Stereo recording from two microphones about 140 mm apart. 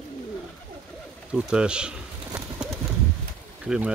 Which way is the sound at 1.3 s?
5° right (ahead or behind).